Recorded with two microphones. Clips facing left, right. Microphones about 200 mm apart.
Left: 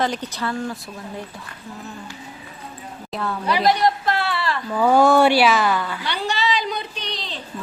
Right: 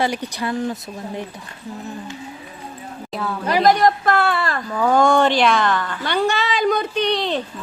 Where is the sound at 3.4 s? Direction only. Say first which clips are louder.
Right 3 dB; 45° right (ahead or behind).